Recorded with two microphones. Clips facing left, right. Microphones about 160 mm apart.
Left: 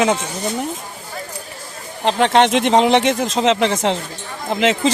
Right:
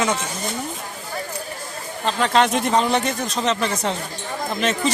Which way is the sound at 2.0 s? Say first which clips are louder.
Left 4 dB; 75° left (ahead or behind).